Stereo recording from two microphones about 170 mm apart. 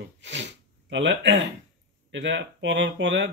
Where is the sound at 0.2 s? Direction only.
90° right.